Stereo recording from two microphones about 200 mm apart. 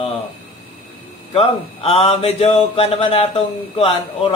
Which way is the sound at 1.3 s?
30° left (ahead or behind).